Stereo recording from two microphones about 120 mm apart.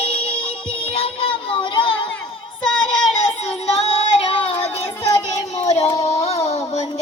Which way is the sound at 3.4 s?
55° left (ahead or behind).